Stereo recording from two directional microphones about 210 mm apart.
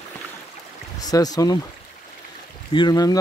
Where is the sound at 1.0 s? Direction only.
15° left (ahead or behind).